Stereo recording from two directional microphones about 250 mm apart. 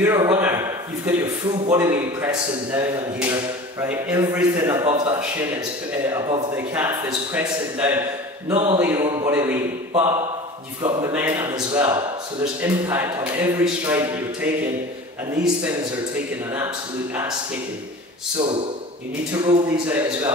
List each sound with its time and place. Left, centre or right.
0.0 s a man's voice: centre
8.5 s a man's voice: right
8.7 s a man's voice: centre
10.8 s a man's voice: centre
16.5 s a man's voice: centre
19.3 s a man's voice: centre